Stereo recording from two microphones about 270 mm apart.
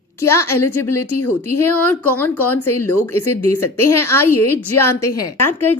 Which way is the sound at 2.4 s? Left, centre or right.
Left.